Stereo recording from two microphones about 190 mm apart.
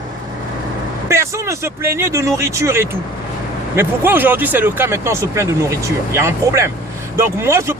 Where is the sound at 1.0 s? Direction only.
15° right (ahead or behind).